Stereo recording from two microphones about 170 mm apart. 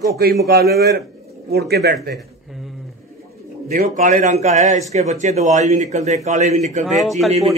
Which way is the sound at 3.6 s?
55° right (ahead or behind).